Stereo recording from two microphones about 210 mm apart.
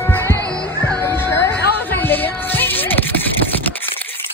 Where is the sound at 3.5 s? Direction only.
10° left (ahead or behind).